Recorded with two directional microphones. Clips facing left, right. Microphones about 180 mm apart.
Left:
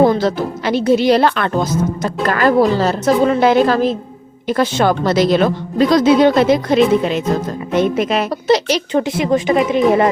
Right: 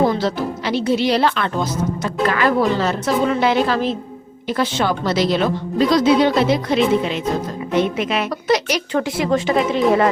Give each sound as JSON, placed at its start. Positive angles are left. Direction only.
{"t": 0.1, "sound": "speech", "side_deg": 50}
{"t": 7.8, "sound": "a woman's voice", "side_deg": 40}